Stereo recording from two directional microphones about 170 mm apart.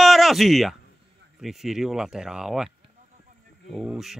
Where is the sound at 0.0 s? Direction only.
Centre (ahead or behind).